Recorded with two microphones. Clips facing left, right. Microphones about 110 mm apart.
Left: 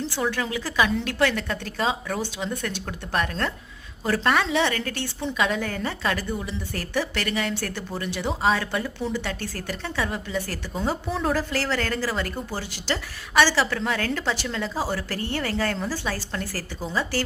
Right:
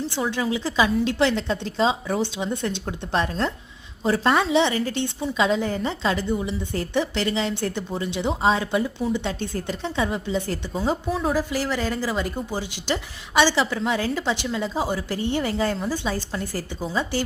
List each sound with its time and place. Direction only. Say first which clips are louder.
0.2 s a woman's voice: right 2 dB; 20° right (ahead or behind)
11.1 s a woman's voice: right 1 dB; 5° right (ahead or behind)